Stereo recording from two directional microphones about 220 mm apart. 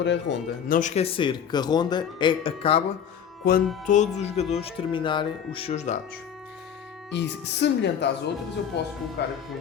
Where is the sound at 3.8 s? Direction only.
35° left (ahead or behind).